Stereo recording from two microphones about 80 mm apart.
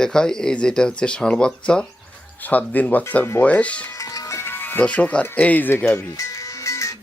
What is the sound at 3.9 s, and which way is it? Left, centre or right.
Music, left.